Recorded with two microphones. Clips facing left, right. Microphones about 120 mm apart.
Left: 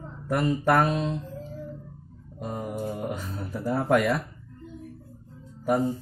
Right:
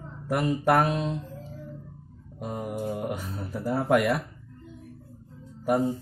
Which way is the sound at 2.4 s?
5° right (ahead or behind).